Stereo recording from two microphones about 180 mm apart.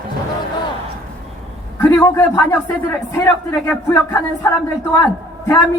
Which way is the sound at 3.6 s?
15° left (ahead or behind).